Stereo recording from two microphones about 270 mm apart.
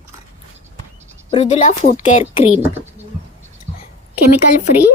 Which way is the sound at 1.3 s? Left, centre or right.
Left.